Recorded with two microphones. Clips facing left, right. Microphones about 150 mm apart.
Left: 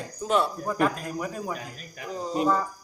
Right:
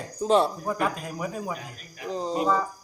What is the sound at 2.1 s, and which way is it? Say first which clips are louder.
Speech: right 1 dB; 30° right (ahead or behind).